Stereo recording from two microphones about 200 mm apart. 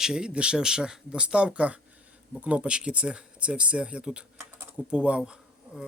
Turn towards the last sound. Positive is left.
turn(degrees=-5)  # may be behind; listen again after turning